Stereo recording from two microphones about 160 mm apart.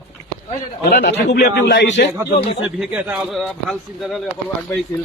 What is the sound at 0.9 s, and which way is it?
A man's voice, 90° left.